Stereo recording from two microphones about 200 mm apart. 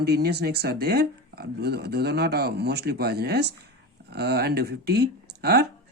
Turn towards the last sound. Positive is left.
turn(degrees=-55)  # may be behind; listen again after turning